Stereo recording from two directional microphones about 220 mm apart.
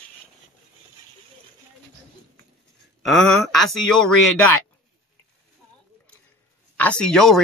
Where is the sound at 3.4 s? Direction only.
Centre (ahead or behind).